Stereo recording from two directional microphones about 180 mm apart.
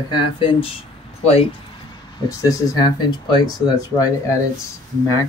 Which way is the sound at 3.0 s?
20° left (ahead or behind).